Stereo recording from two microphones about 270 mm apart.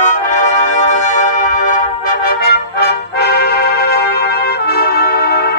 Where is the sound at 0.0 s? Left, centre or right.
Left.